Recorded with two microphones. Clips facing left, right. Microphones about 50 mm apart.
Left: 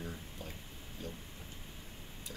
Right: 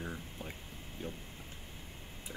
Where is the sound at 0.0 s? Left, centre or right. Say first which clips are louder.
Right 2 dB; right.